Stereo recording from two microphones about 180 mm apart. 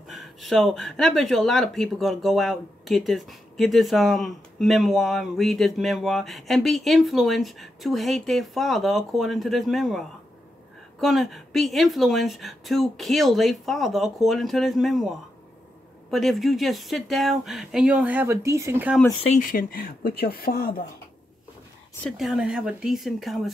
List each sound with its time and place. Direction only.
0.1 s speech: centre (ahead or behind)
19.3 s speech: 50° left (ahead or behind)
22.0 s speech: centre (ahead or behind)